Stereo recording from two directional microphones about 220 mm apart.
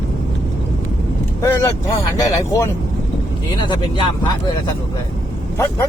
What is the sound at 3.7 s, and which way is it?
Speech, 20° left (ahead or behind).